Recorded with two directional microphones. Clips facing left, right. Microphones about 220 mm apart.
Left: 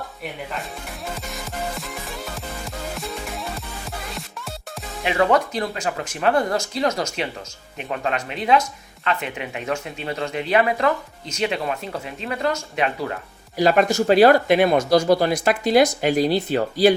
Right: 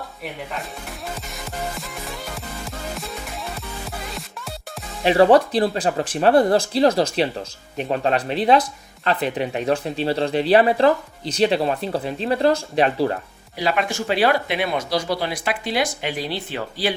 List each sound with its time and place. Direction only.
1.3 s music: centre (ahead or behind)
5.0 s speech: 35° right (ahead or behind)
13.6 s speech: 45° left (ahead or behind)